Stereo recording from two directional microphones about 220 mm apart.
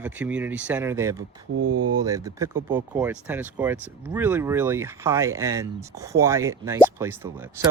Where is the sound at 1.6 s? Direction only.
90° right.